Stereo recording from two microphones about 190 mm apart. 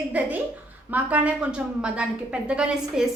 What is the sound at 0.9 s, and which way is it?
A woman's voice, 10° right (ahead or behind).